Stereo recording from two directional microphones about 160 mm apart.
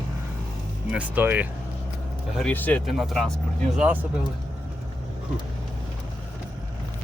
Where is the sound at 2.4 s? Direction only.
10° left (ahead or behind).